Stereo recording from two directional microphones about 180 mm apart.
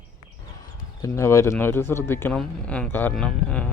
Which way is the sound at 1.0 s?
15° left (ahead or behind).